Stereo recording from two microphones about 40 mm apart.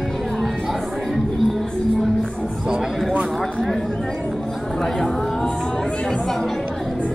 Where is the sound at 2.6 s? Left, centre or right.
Centre.